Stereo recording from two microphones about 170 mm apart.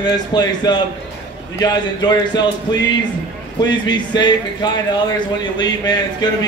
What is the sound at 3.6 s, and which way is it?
A man's voice, 25° left (ahead or behind).